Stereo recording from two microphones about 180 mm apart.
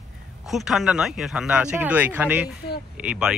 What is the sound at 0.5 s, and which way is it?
Speech, centre (ahead or behind).